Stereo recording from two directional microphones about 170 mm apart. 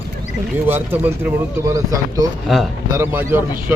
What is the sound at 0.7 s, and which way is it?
Speech, 10° right (ahead or behind).